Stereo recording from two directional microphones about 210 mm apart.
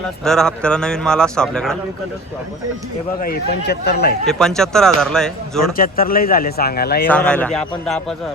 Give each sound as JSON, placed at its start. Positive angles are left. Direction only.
{"t": 0.3, "sound": "speech", "side_deg": 5}
{"t": 3.2, "sound": "speech", "side_deg": 45}
{"t": 4.3, "sound": "speech", "side_deg": 0}
{"t": 5.7, "sound": "speech", "side_deg": 45}
{"t": 7.1, "sound": "speech", "side_deg": 5}